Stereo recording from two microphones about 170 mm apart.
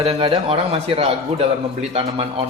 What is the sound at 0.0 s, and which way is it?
Speech, 35° right (ahead or behind).